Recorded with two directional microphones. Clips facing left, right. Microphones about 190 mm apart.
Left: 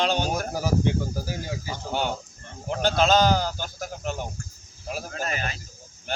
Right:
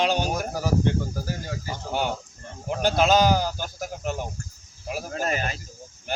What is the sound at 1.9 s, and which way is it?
Speech, 10° right (ahead or behind).